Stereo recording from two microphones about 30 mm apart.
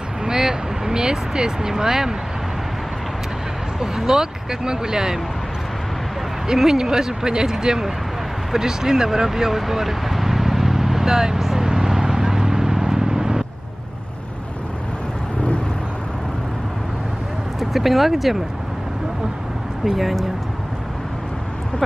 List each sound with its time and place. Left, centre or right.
0.2 s vehicle: right
1.3 s speech: right
3.8 s speech: centre
6.4 s speech: centre
11.5 s vehicle: centre
17.6 s speech: centre
19.8 s speech: centre